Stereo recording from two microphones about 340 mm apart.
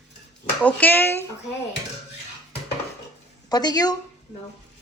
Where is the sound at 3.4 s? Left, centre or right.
Centre.